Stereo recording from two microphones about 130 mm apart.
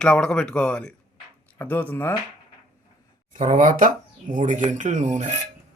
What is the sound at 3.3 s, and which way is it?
Speech, 75° right (ahead or behind).